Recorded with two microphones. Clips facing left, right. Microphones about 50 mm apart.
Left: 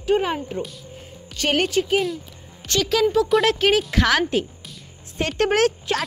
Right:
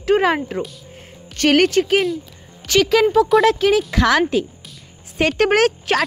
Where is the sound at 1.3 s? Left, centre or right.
Right.